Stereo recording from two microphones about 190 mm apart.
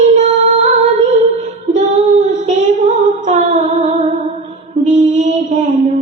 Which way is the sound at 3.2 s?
40° right (ahead or behind).